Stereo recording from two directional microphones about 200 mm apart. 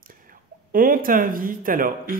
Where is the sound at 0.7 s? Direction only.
45° right (ahead or behind).